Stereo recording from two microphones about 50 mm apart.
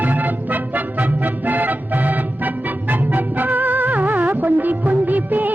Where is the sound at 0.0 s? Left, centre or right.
Right.